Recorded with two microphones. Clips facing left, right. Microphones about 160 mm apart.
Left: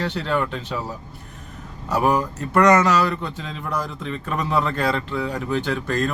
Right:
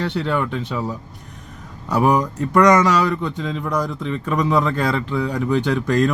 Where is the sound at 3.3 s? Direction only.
10° left (ahead or behind).